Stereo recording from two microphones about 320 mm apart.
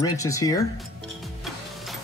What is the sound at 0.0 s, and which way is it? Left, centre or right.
Speech, centre.